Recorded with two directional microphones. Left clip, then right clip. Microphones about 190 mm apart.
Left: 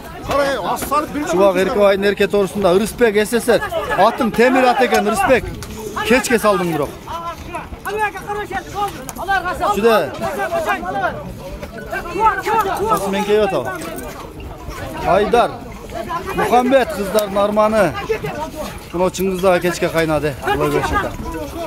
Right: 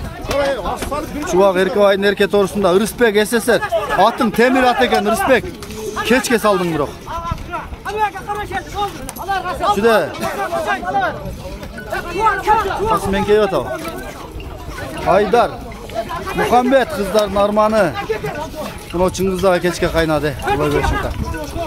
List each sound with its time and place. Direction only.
0.4 s a sound: 60° left (ahead or behind)
1.2 s speech: 10° right (ahead or behind)
7.5 s a sound: centre (ahead or behind)
9.2 s speech: 25° left (ahead or behind)
9.7 s speech: 5° right (ahead or behind)
12.2 s speech: 5° right (ahead or behind)
15.0 s speech: 10° right (ahead or behind)
18.9 s speech: 5° right (ahead or behind)